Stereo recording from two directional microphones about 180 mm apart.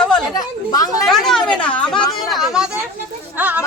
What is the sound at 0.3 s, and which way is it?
Speech, 20° left (ahead or behind).